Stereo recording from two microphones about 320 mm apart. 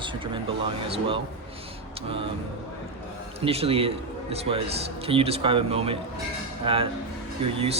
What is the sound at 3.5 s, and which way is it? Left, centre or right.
Speech, centre.